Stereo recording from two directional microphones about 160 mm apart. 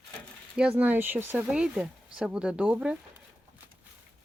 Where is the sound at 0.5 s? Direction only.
5° right (ahead or behind).